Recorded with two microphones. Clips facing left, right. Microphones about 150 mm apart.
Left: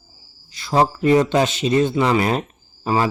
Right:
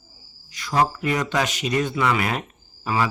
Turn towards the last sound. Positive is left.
turn(degrees=30)  # may be behind; listen again after turning